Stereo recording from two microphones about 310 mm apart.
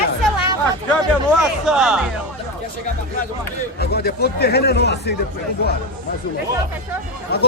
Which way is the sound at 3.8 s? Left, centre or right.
Left.